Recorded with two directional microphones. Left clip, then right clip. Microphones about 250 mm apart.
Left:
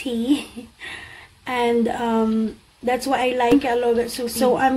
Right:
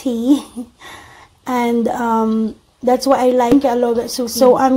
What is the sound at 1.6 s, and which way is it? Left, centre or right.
A woman's voice, right.